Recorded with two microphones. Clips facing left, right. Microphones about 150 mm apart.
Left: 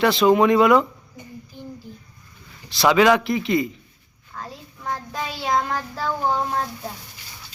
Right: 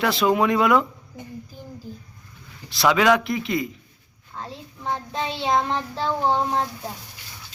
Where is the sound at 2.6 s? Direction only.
Centre (ahead or behind).